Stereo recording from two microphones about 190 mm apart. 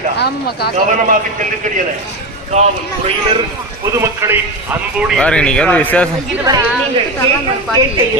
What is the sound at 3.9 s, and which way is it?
Speech, 15° right (ahead or behind).